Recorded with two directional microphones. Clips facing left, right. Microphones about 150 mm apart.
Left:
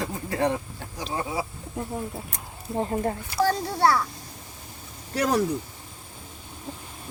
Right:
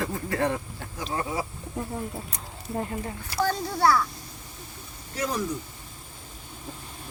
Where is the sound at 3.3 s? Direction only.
30° left (ahead or behind).